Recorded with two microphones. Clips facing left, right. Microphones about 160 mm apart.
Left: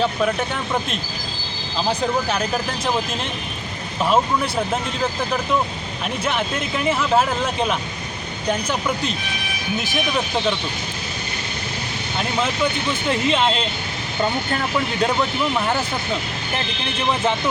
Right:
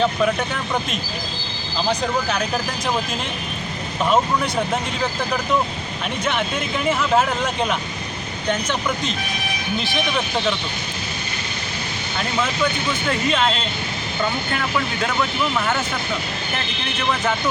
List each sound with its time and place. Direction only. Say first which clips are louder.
0.0 s speech: right 1 dB; 5° left (ahead or behind)
4.1 s speech: even; centre (ahead or behind)
6.2 s speech: right 1 dB; centre (ahead or behind)
13.1 s speech: left 1 dB; 20° left (ahead or behind)
15.0 s speech: left 4 dB; 30° left (ahead or behind)